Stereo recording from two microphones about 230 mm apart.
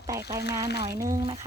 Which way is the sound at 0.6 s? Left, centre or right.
Left.